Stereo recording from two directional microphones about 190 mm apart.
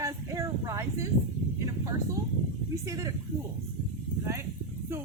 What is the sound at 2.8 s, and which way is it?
Speech, 15° right (ahead or behind).